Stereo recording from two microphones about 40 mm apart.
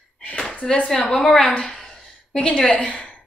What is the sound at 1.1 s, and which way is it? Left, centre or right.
Speech, centre.